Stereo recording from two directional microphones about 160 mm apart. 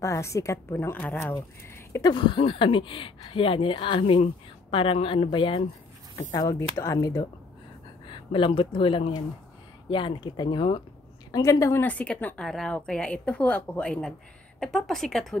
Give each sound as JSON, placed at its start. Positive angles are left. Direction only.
{"t": 0.0, "sound": "a woman's voice", "side_deg": 20}
{"t": 1.9, "sound": "speech", "side_deg": 25}
{"t": 8.1, "sound": "speech", "side_deg": 30}
{"t": 11.3, "sound": "a woman's voice", "side_deg": 20}